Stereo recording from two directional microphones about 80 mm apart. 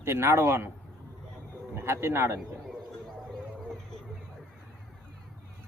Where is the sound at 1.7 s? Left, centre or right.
Right.